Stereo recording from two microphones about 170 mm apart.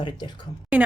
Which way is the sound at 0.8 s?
5° right (ahead or behind).